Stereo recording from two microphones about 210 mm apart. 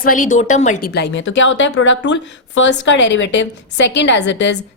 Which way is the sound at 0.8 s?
50° left (ahead or behind).